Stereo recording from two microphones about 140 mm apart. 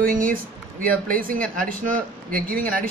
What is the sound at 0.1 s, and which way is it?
A man's voice, 75° right (ahead or behind).